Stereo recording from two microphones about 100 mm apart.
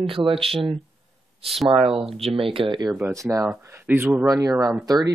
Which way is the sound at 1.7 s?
65° right (ahead or behind).